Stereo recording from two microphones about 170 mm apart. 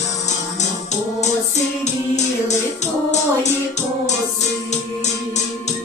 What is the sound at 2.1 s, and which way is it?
Music, 40° left (ahead or behind).